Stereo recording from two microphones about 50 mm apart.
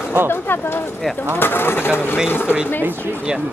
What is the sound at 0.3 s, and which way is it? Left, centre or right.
Speech, left.